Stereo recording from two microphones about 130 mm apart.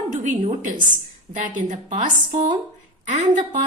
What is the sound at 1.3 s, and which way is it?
Speech, 80° right.